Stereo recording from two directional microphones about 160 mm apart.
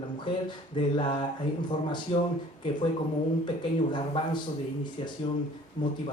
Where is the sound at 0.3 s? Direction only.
30° left (ahead or behind).